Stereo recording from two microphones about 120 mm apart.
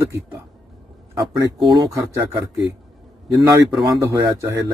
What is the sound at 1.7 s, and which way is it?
Speech, 30° right (ahead or behind).